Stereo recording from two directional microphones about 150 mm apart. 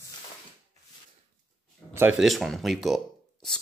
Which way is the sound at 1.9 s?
15° right (ahead or behind).